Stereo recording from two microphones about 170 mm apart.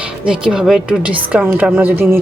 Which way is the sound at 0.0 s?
5° right (ahead or behind).